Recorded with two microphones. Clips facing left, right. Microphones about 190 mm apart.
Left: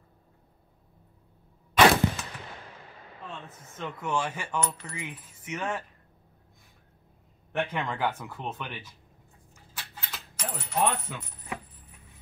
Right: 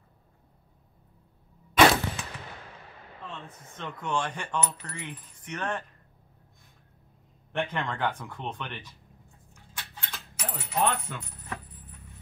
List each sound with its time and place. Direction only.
2.2 s machine gun: centre (ahead or behind)
3.3 s speech: 5° left (ahead or behind)
7.5 s speech: 5° left (ahead or behind)
9.8 s coin: centre (ahead or behind)